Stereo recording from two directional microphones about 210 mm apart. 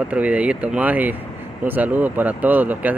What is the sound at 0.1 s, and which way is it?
Speech, 5° right (ahead or behind).